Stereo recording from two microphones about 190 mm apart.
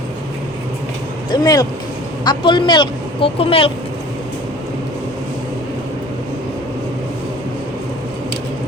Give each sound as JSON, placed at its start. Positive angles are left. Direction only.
{"t": 1.3, "sound": "a woman's voice", "side_deg": 20}